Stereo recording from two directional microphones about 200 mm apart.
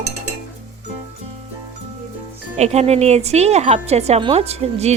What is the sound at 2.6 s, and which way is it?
Speech, 30° right (ahead or behind).